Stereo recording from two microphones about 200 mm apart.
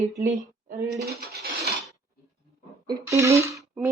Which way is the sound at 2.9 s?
15° right (ahead or behind).